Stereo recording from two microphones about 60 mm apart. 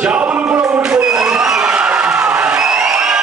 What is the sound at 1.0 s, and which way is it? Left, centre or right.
Crowd, centre.